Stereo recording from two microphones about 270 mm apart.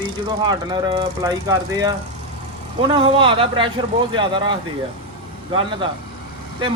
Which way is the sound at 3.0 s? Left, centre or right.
Centre.